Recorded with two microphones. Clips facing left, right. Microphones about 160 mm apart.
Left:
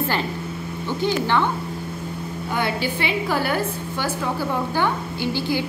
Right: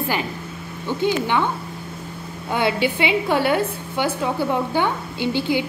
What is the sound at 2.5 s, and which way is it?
A woman's voice, 20° right (ahead or behind).